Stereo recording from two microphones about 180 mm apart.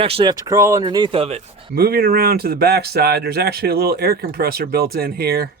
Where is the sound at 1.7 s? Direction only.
55° right (ahead or behind).